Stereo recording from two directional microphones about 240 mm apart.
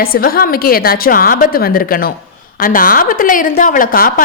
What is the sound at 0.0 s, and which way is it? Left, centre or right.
A woman's voice, left.